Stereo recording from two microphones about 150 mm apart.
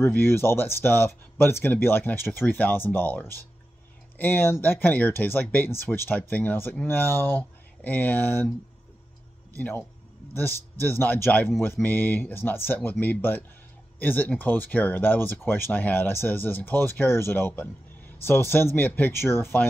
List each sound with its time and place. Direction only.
0.0 s speech: 15° left (ahead or behind)
9.5 s speech: 10° left (ahead or behind)